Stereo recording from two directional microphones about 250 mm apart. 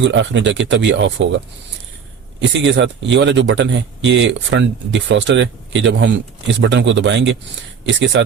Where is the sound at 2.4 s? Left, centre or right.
Right.